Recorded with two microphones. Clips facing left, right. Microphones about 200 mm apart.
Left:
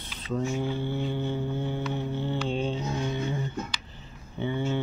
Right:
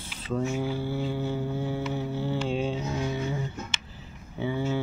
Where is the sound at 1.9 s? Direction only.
5° right (ahead or behind).